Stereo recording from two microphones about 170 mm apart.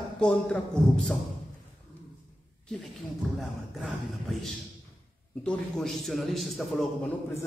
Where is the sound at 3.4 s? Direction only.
Centre (ahead or behind).